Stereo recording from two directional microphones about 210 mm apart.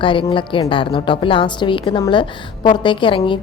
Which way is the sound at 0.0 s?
25° left (ahead or behind).